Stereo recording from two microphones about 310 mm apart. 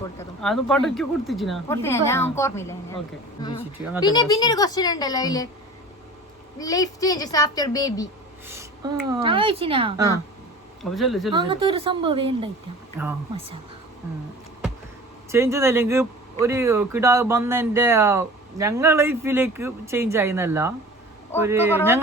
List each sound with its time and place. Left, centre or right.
0.0 s a woman's voice: centre
4.0 s a woman's voice: centre
6.6 s a woman's voice: centre
8.4 s speech: centre
10.8 s speech: centre
11.3 s speech: centre
15.3 s speech: centre